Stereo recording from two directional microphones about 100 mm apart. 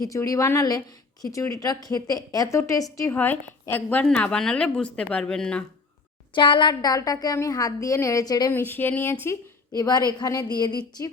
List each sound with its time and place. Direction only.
0.0 s a woman's voice: 35° left (ahead or behind)
3.2 s a woman's voice: 20° left (ahead or behind)
6.3 s a woman's voice: 55° left (ahead or behind)
8.5 s speech: 20° left (ahead or behind)
9.7 s a woman's voice: 45° left (ahead or behind)